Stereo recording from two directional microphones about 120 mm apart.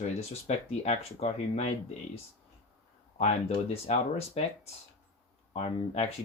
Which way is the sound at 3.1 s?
65° left (ahead or behind).